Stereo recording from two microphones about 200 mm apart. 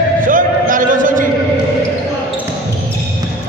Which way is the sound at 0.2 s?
40° right (ahead or behind).